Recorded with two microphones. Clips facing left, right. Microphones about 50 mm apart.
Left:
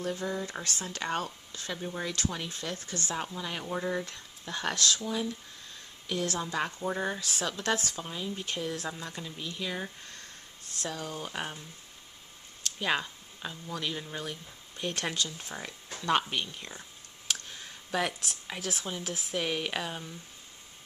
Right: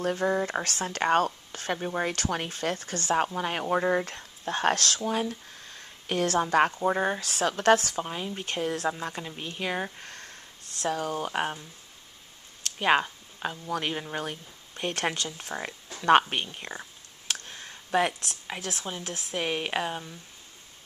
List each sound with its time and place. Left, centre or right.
0.0 s speech: right
4.7 s speech: right
5.0 s speech: right
6.8 s speech: right
8.0 s speech: right
9.9 s a sound: right
10.8 s speech: right
12.6 s a sound: right
13.7 s speech: right
17.9 s speech: right
18.6 s speech: centre
19.3 s speech: right